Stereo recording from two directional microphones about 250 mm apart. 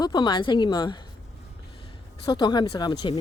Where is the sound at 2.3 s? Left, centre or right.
Centre.